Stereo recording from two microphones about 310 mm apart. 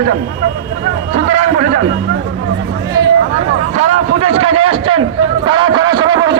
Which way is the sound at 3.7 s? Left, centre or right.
Right.